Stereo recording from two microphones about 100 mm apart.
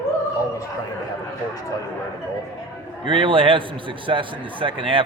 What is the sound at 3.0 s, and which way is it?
A man's voice, 60° right (ahead or behind).